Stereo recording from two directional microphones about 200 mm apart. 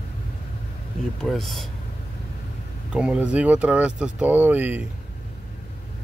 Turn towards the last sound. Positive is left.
turn(degrees=-10)  # may be behind; listen again after turning